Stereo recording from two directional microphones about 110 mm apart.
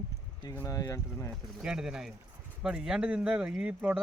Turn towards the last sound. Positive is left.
turn(degrees=-15)  # may be behind; listen again after turning